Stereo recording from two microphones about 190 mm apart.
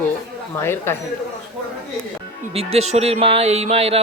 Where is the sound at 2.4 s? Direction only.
30° right (ahead or behind).